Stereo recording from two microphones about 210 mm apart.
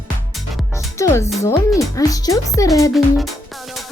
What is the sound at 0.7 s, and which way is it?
Speech, 15° left (ahead or behind).